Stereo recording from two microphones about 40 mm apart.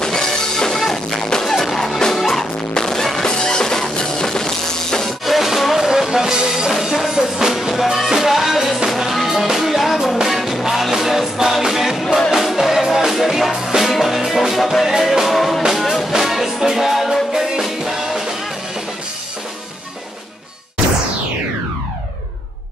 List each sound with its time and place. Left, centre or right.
0.0 s music: centre
5.0 s music: centre